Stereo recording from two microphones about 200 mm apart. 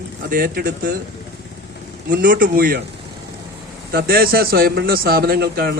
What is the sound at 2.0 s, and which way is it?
Speech, 45° right (ahead or behind).